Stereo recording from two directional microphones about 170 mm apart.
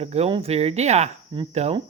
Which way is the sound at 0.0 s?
40° right (ahead or behind).